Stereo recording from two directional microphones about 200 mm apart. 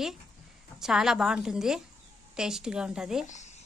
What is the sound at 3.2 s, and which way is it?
Speech, 35° left (ahead or behind).